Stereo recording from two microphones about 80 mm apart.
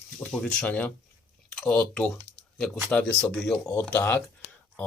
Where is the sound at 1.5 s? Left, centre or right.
Centre.